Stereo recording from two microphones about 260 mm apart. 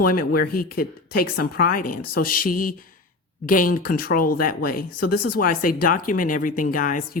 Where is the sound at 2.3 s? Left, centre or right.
Left.